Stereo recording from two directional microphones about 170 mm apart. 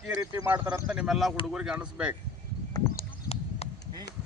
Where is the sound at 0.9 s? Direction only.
5° right (ahead or behind).